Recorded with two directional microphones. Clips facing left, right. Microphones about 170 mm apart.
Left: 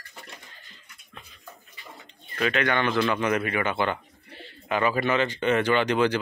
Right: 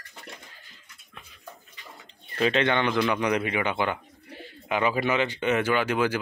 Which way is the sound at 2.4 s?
25° right (ahead or behind).